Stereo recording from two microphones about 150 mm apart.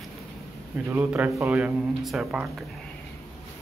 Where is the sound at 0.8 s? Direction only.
15° right (ahead or behind).